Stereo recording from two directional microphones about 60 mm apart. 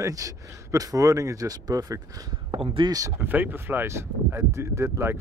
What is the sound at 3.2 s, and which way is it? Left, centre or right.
Speech, right.